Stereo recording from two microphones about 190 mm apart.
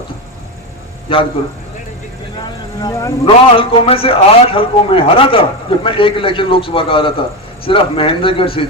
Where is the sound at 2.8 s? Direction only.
15° left (ahead or behind).